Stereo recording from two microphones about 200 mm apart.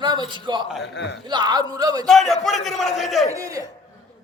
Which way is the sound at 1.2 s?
20° right (ahead or behind).